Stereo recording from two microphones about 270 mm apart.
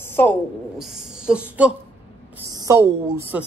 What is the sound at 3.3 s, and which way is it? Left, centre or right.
Speech, centre.